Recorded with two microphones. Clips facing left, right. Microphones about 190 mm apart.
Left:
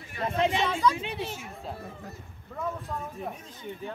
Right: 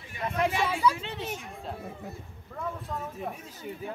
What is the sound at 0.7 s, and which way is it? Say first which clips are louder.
Speech: even; 10° right (ahead or behind).